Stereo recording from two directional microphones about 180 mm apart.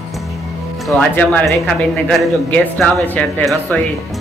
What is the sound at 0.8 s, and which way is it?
Speech, 10° left (ahead or behind).